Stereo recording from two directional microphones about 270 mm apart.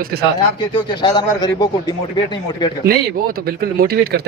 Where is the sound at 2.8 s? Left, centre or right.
Right.